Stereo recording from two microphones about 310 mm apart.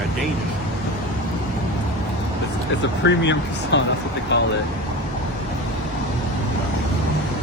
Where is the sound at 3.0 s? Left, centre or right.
Left.